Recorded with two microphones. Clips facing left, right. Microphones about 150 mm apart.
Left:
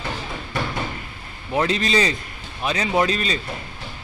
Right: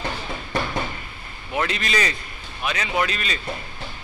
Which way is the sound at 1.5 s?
30° left (ahead or behind).